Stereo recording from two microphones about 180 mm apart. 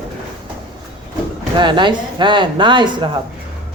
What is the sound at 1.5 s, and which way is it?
Speech, 25° right (ahead or behind).